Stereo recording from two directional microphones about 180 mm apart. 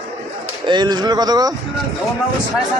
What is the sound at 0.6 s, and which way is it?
Speech, 25° right (ahead or behind).